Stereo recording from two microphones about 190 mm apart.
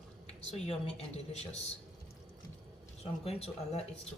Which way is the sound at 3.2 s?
30° left (ahead or behind).